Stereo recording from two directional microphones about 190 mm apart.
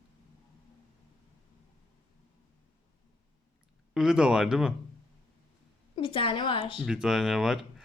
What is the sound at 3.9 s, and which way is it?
Speech, 5° right (ahead or behind).